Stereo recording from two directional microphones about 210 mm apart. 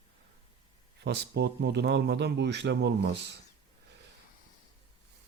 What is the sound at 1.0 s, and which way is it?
A man's voice, 50° right (ahead or behind).